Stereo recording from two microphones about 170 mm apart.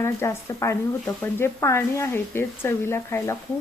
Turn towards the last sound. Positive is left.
turn(degrees=15)  # may be behind; listen again after turning